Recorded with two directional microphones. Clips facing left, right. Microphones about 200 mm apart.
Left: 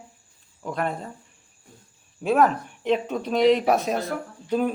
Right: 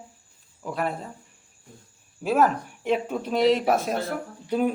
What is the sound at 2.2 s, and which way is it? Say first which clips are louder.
Speech: left 1 dB; 5° right (ahead or behind).